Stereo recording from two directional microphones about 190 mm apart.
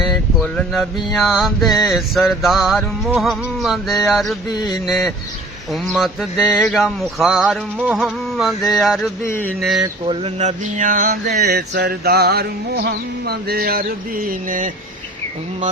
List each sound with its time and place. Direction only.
0.0 s a sound: centre (ahead or behind)
9.2 s speech: 10° left (ahead or behind)
9.8 s mantra: 30° right (ahead or behind); by 14.7 s 45° right (ahead or behind)